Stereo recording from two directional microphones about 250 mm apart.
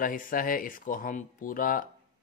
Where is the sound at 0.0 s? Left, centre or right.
Left.